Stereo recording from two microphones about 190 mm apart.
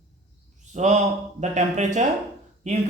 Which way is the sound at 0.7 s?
40° right (ahead or behind).